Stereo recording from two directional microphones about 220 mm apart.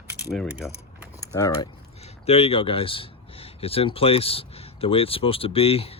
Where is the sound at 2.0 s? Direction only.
30° left (ahead or behind).